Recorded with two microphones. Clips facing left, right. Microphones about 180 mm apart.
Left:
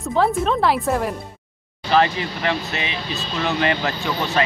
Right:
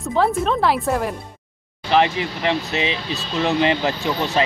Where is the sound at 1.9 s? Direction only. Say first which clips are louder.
Even; 20° right (ahead or behind).